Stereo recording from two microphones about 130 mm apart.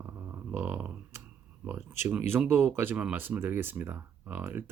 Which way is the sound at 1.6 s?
15° right (ahead or behind).